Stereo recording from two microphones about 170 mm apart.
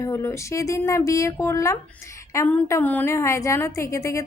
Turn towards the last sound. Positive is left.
turn(degrees=15)  # may be behind; listen again after turning